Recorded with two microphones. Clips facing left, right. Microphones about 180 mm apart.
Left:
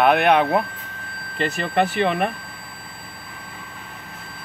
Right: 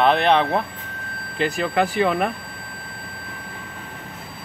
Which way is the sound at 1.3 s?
Centre (ahead or behind).